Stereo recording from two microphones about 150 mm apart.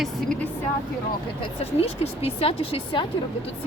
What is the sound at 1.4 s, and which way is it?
Speech, 40° left (ahead or behind).